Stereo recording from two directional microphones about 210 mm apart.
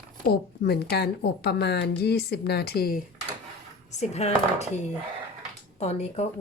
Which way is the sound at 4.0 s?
30° left (ahead or behind).